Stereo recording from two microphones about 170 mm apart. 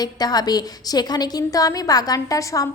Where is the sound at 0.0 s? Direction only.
25° left (ahead or behind).